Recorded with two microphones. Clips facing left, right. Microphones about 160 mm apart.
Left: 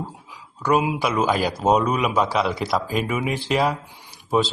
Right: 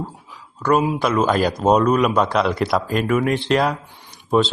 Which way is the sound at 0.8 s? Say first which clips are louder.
Right 3 dB; 10° left (ahead or behind).